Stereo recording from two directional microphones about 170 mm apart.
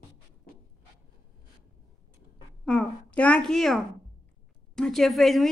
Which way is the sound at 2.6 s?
5° left (ahead or behind).